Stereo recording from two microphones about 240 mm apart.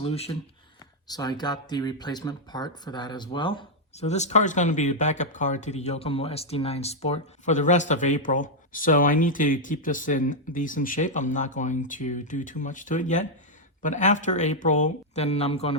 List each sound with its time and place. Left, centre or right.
0.0 s speech: left